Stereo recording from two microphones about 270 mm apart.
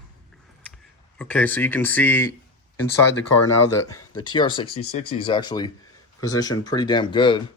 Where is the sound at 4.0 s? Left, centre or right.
Left.